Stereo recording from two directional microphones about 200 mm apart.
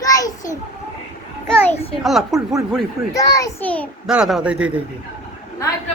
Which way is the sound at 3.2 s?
15° left (ahead or behind).